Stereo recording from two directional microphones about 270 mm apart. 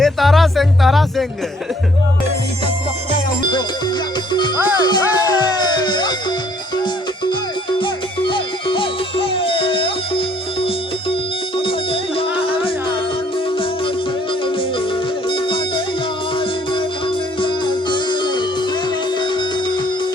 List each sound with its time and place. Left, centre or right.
0.0 s music: centre
4.3 s music: centre
7.8 s music: centre
15.3 s music: centre
17.4 s music: centre